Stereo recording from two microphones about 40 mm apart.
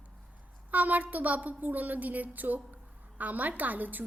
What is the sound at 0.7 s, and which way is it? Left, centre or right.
A woman's voice, right.